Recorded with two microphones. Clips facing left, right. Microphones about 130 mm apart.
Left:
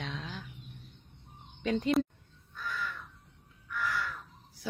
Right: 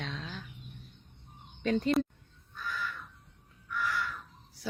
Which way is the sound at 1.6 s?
15° left (ahead or behind).